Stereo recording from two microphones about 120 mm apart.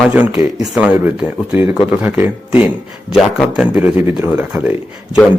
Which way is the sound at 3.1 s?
Centre (ahead or behind).